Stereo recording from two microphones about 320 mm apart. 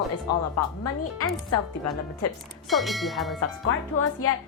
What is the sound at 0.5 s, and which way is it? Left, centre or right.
Speech, left.